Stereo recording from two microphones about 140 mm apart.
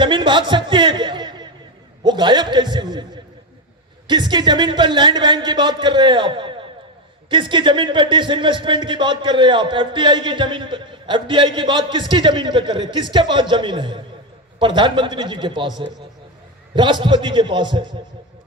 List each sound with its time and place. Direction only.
0.0 s speech: 35° right (ahead or behind)
16.7 s speech: 35° right (ahead or behind)